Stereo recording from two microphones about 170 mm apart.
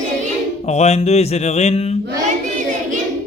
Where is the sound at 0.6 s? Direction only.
40° left (ahead or behind).